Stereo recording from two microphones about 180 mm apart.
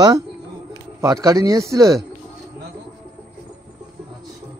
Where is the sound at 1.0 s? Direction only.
20° right (ahead or behind).